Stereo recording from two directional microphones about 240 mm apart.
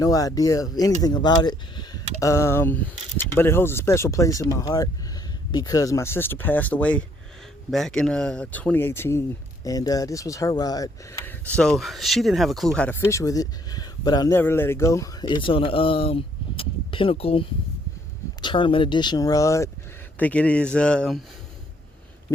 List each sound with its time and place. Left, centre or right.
0.0 s speech: centre
18.4 s speech: left; by 21.2 s centre